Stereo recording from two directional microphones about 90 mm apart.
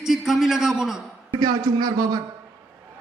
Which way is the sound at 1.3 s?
50° right (ahead or behind).